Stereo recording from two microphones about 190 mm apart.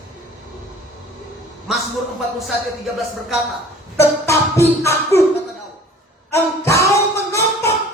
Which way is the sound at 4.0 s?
15° left (ahead or behind).